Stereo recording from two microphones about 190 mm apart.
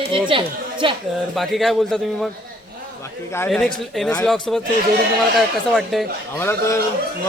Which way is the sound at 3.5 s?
5° left (ahead or behind).